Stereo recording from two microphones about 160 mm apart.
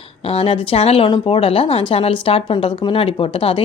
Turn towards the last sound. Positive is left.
turn(degrees=35)  # may be behind; listen again after turning